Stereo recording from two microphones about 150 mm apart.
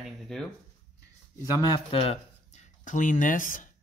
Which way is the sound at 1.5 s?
35° left (ahead or behind).